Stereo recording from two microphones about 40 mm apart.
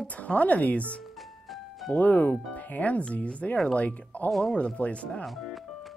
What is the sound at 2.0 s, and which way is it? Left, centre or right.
A woman's voice, left.